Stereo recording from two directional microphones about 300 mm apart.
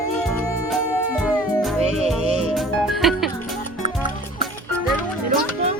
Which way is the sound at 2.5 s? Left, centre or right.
Centre.